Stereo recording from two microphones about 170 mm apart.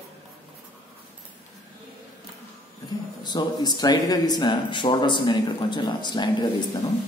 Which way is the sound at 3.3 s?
25° left (ahead or behind).